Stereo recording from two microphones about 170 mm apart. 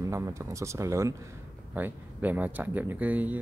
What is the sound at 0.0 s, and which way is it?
Speech, 15° right (ahead or behind).